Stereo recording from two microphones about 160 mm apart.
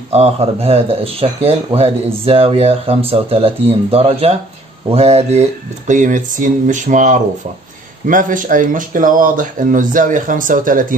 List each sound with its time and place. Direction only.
0.1 s speech: 40° right (ahead or behind); by 11.0 s 60° right (ahead or behind)